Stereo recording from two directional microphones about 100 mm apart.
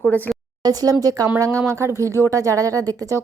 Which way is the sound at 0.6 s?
40° right (ahead or behind).